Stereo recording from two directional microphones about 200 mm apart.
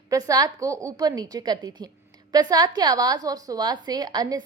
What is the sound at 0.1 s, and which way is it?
A woman's voice, 20° right (ahead or behind).